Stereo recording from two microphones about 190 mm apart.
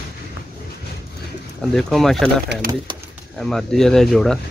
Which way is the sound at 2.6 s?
50° right (ahead or behind).